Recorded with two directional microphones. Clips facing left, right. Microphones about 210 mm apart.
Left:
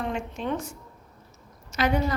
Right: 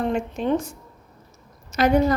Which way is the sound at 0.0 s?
40° right (ahead or behind).